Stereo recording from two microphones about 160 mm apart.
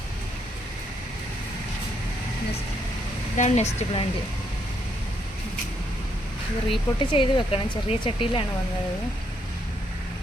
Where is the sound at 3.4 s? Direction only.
45° left (ahead or behind).